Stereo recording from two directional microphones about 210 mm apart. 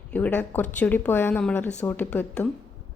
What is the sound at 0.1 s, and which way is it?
Speech, 5° left (ahead or behind).